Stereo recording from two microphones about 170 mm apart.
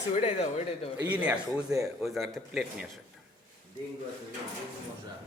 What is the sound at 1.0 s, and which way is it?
Speech, 10° right (ahead or behind).